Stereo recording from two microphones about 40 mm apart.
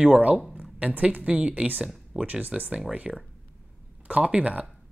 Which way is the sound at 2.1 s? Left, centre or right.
Centre.